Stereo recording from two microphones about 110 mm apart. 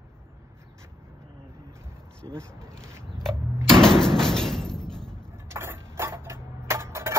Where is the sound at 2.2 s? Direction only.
45° right (ahead or behind).